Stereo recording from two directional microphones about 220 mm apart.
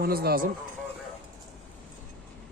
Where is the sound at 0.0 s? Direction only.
45° right (ahead or behind).